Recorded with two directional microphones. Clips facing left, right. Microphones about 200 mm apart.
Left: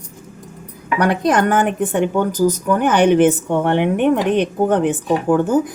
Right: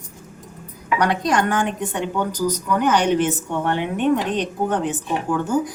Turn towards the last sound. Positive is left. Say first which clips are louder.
# left 6 dB
turn(degrees=55)  # may be behind; listen again after turning